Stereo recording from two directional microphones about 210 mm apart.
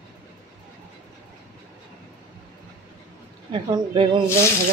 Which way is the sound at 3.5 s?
25° right (ahead or behind).